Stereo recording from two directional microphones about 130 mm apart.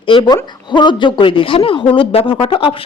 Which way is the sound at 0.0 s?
40° left (ahead or behind).